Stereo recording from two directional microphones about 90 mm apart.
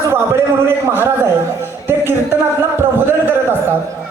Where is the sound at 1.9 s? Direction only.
25° right (ahead or behind).